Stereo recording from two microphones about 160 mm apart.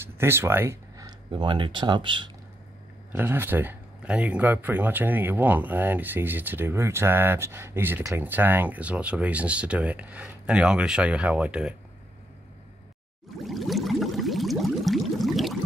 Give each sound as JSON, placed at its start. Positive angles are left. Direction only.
{"t": 0.2, "sound": "speech", "side_deg": -15}
{"t": 3.1, "sound": "speech", "side_deg": -15}
{"t": 13.4, "sound": "a sound", "side_deg": 0}